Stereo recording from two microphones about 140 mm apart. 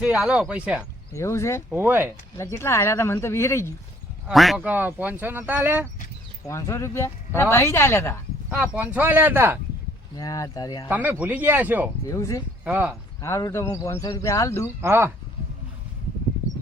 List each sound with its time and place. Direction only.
0.0 s speech: 5° right (ahead or behind)
1.1 s speech: 20° left (ahead or behind)
1.7 s speech: 15° right (ahead or behind)
2.4 s speech: 20° left (ahead or behind)
4.3 s speech: centre (ahead or behind)
4.6 s speech: 10° right (ahead or behind)
6.5 s speech: 20° left (ahead or behind)
8.4 s speech: 10° right (ahead or behind)
10.2 s speech: 25° left (ahead or behind)
10.8 s speech: 15° right (ahead or behind)
12.0 s speech: 20° left (ahead or behind)
12.6 s speech: 10° right (ahead or behind)
13.2 s speech: 20° left (ahead or behind)
14.8 s speech: 15° right (ahead or behind)